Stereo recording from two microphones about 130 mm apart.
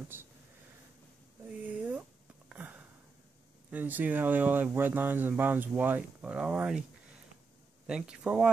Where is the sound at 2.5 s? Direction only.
10° right (ahead or behind).